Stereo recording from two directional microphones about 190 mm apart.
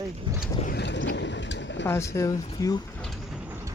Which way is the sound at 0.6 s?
60° left (ahead or behind).